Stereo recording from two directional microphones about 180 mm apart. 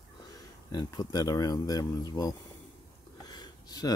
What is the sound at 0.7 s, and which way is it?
Speech, 20° left (ahead or behind).